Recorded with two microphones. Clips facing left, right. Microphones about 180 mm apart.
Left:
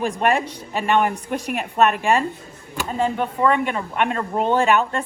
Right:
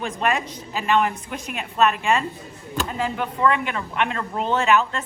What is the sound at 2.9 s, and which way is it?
Speech, 35° left (ahead or behind).